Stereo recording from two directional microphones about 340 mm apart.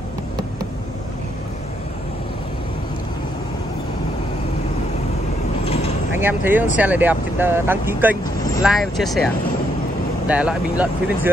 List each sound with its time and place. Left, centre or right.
5.7 s mechanisms: centre
6.1 s speech: centre